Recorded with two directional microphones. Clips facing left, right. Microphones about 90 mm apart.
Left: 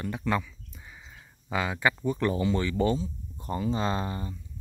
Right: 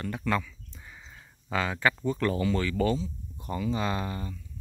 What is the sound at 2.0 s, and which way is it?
Speech, 20° left (ahead or behind).